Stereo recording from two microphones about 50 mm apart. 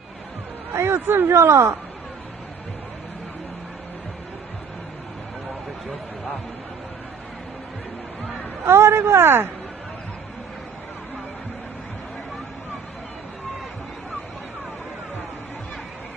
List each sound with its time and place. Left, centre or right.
0.7 s speech: right
8.6 s speech: right